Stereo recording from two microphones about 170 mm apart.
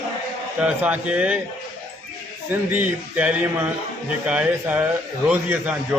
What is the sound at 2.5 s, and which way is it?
A man's voice, 10° right (ahead or behind).